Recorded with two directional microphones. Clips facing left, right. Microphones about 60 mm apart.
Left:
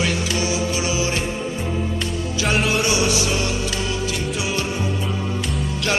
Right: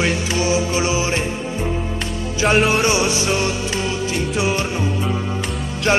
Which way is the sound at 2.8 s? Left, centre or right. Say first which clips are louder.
Right 2 dB; right.